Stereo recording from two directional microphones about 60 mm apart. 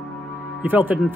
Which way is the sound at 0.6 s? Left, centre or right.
Right.